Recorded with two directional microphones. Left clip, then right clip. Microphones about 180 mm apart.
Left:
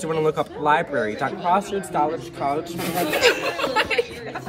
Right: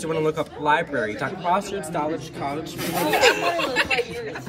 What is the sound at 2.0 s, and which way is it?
Speech, 35° left (ahead or behind).